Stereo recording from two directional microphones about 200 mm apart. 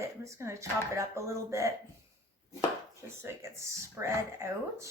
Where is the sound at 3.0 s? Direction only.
15° right (ahead or behind).